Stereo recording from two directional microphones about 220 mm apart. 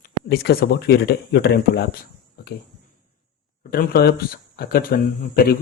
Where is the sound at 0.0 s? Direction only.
45° left (ahead or behind).